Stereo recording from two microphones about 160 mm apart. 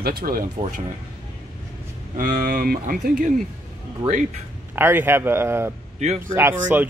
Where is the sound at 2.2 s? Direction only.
65° right (ahead or behind).